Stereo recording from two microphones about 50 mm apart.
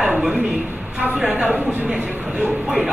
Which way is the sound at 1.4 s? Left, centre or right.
Right.